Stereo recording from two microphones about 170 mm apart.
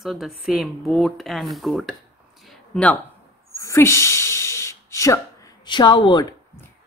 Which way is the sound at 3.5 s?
15° left (ahead or behind).